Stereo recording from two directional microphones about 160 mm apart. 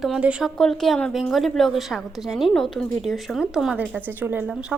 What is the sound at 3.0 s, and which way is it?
Speech, centre (ahead or behind).